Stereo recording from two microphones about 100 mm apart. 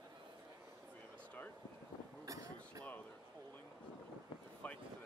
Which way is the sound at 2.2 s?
35° right (ahead or behind).